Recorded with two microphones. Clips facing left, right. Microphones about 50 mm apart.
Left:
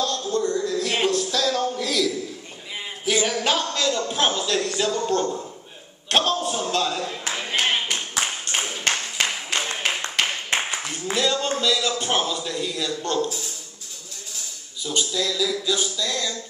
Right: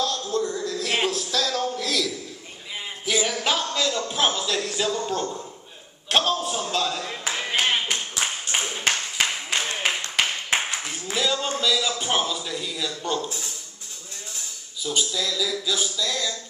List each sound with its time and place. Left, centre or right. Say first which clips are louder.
0.0 s a sound: left 2 dB; centre
6.0 s a man's voice: left 1 dB; centre
7.2 s clapping: right 1 dB; centre
8.2 s a sound: even; centre
11.1 s a man's voice: left 2 dB; centre
14.8 s a man's voice: left 1 dB; centre